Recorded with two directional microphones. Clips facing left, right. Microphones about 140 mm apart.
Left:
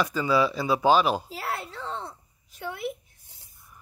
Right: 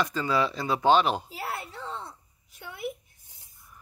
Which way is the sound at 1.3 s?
90° left.